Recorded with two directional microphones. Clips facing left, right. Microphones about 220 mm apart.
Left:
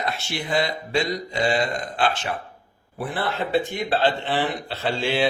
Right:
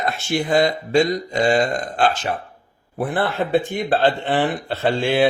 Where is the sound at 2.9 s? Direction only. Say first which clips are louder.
Right 5 dB; 50° right (ahead or behind).